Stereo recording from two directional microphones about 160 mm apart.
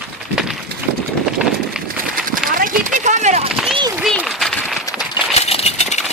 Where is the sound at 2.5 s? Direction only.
60° right (ahead or behind).